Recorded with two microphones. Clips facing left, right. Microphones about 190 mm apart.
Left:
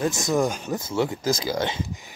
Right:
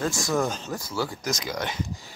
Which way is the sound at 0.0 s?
20° left (ahead or behind).